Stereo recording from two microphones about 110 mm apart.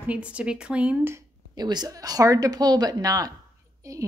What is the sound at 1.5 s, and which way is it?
A woman's voice, 40° right (ahead or behind).